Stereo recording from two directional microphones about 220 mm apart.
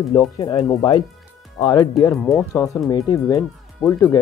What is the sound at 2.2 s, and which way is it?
Speech, centre (ahead or behind).